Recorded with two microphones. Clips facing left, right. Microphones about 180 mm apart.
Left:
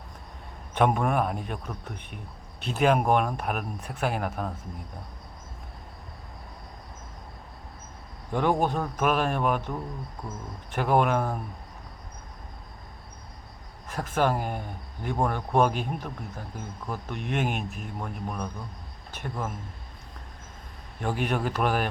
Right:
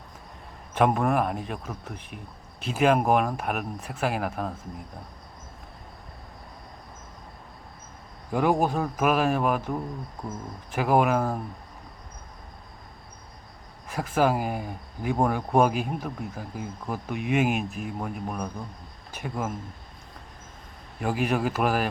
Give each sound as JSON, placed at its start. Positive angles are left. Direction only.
{"t": 0.7, "sound": "speech", "side_deg": 0}
{"t": 8.3, "sound": "speech", "side_deg": -10}
{"t": 13.8, "sound": "speech", "side_deg": -10}
{"t": 21.0, "sound": "speech", "side_deg": -5}